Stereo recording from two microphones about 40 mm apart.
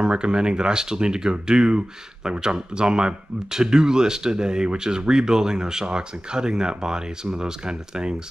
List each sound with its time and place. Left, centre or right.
0.0 s speech: right